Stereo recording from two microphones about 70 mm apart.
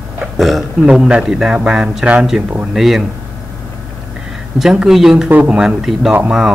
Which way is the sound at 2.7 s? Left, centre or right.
Centre.